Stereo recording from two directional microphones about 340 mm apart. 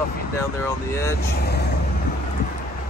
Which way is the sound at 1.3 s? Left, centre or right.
Left.